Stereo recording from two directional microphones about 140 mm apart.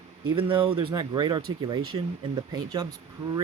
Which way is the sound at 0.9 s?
30° right (ahead or behind).